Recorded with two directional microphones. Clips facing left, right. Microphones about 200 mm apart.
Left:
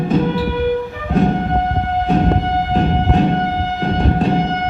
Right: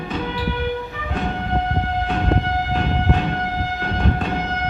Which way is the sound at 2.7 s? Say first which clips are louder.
Left 6 dB; 35° left (ahead or behind).